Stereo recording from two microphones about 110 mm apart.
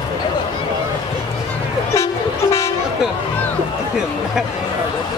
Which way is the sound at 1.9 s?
25° left (ahead or behind).